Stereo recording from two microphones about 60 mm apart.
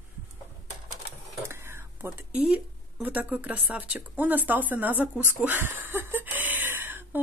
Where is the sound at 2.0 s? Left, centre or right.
Right.